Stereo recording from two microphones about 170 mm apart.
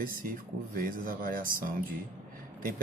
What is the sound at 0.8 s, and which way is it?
Speech, 55° right (ahead or behind).